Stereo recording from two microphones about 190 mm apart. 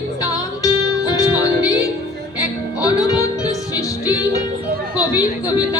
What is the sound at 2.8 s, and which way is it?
Music, 20° left (ahead or behind).